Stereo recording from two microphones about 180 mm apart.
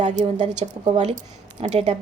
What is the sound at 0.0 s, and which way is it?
A woman's voice, 40° right (ahead or behind).